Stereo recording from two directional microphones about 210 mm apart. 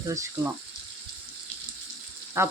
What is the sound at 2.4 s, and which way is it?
Frying, 10° right (ahead or behind).